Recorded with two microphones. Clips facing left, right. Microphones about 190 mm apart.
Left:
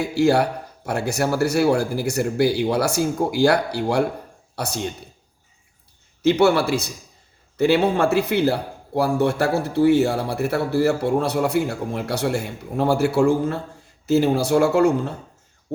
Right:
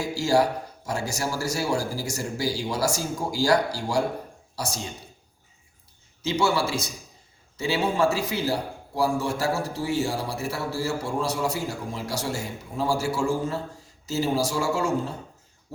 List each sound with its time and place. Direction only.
0.0 s a man's voice: 60° left (ahead or behind)
6.2 s a man's voice: 60° left (ahead or behind)